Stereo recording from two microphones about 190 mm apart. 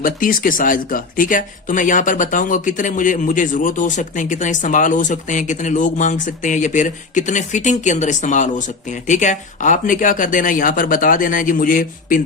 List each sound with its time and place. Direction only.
0.0 s speech: 45° left (ahead or behind)